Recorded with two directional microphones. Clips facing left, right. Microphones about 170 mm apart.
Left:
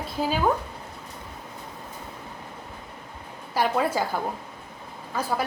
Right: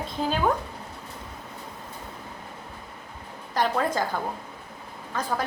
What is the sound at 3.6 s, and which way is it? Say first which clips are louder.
A woman's voice: left 1 dB; 10° left (ahead or behind).